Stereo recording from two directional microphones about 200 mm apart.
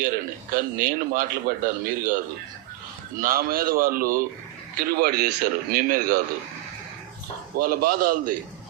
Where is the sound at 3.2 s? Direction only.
45° right (ahead or behind).